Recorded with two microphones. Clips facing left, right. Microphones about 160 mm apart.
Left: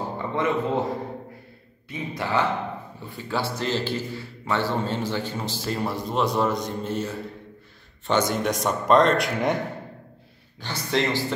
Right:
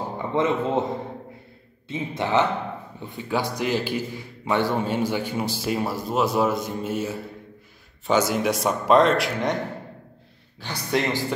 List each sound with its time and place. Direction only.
0.2 s a man's voice: 20° right (ahead or behind); by 9.6 s centre (ahead or behind)
10.6 s a man's voice: 10° right (ahead or behind)